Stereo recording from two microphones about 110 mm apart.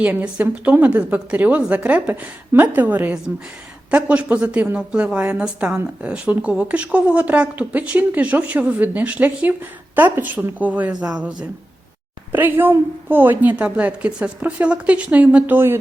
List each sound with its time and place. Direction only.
0.0 s a woman's voice: 15° right (ahead or behind)
12.3 s a woman's voice: 15° right (ahead or behind)